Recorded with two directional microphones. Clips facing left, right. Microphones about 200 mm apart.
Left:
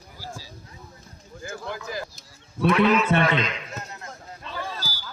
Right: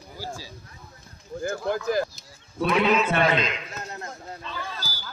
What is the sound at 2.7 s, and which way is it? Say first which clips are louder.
Speech: left 2 dB; 20° right (ahead or behind).